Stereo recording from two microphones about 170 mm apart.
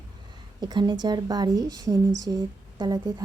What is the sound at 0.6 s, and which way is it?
A woman's voice, 25° right (ahead or behind).